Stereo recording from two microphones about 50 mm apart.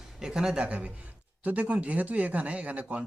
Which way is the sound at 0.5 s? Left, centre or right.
Right.